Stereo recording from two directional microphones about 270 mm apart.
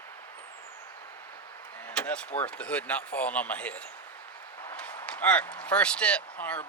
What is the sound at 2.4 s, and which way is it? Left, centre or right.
Speech, centre.